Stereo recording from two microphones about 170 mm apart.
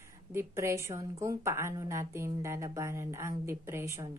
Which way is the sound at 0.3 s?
15° right (ahead or behind).